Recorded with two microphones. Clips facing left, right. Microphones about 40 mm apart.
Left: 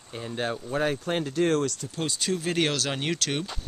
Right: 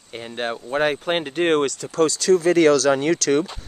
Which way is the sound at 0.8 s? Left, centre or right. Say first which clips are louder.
Right 6 dB; right.